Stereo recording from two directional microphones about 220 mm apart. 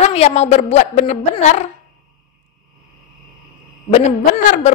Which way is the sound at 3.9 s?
35° left (ahead or behind).